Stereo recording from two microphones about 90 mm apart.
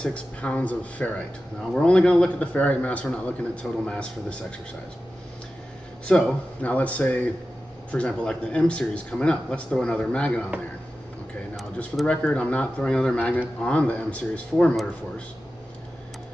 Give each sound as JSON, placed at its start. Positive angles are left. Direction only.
{"t": 0.0, "sound": "speech", "side_deg": 15}
{"t": 6.0, "sound": "speech", "side_deg": 10}
{"t": 12.1, "sound": "speech", "side_deg": 10}